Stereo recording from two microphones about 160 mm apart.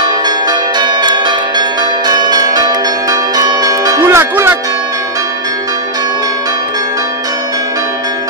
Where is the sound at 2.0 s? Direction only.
25° right (ahead or behind).